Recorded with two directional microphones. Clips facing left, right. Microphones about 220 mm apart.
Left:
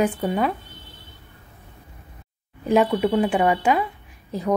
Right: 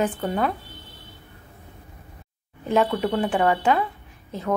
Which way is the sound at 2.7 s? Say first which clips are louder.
Left 3 dB; 15° left (ahead or behind).